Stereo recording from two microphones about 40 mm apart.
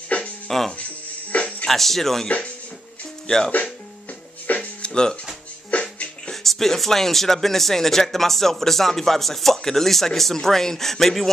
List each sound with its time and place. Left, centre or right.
0.5 s speech: centre
1.3 s music: left
1.7 s speech: centre
2.2 s speech: left
3.3 s speech: centre
4.6 s music: left
6.4 s speech: centre